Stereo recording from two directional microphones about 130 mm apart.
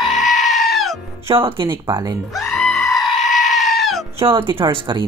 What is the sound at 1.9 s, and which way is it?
Speech, 30° right (ahead or behind).